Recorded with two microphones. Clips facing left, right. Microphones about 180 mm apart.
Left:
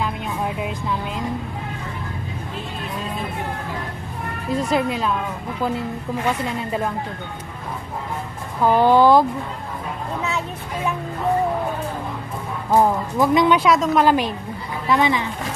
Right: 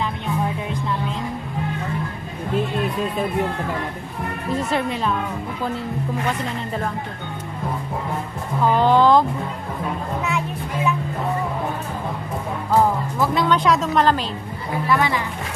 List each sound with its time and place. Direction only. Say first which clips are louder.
4.6 s speech: left 3 dB; centre (ahead or behind)
8.7 s speech: left 2 dB; 10° left (ahead or behind)
12.7 s speech: left 2 dB; 15° left (ahead or behind)
13.6 s speech: left 2 dB; centre (ahead or behind)
14.9 s a woman's voice: left 2 dB; 20° left (ahead or behind)